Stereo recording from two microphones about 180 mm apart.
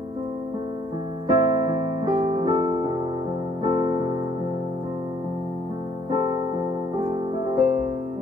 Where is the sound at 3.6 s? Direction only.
25° right (ahead or behind).